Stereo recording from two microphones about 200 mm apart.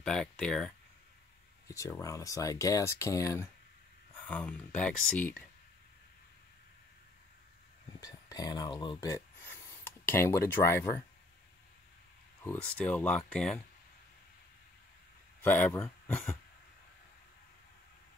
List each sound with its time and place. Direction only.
0.0 s speech: 5° left (ahead or behind)
1.7 s speech: 15° left (ahead or behind)
8.0 s speech: 20° left (ahead or behind)
12.4 s speech: 5° left (ahead or behind)
15.4 s speech: 10° left (ahead or behind)